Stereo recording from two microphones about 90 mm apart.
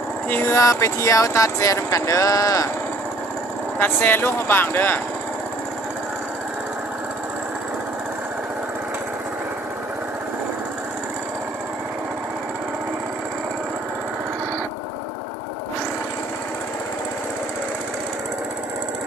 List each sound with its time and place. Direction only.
0.3 s speech: 30° left (ahead or behind)
3.8 s speech: 25° left (ahead or behind)